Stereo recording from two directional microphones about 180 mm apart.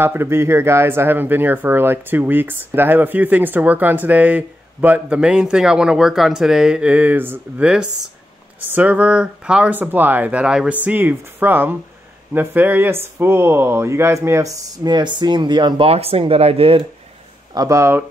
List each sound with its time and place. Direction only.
0.0 s speech: 15° right (ahead or behind); by 16.8 s 30° right (ahead or behind)
17.6 s speech: 15° right (ahead or behind)